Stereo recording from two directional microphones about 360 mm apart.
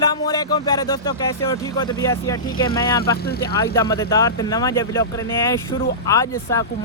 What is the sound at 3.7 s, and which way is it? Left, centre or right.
Speech, centre.